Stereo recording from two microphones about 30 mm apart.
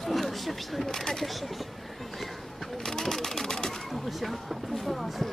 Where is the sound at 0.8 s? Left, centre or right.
Centre.